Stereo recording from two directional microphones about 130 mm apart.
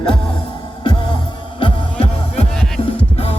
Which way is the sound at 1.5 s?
45° left (ahead or behind).